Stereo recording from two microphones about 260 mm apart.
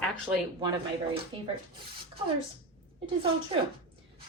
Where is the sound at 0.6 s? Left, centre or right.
Centre.